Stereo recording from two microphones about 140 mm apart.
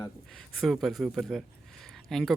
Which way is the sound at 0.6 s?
Centre (ahead or behind).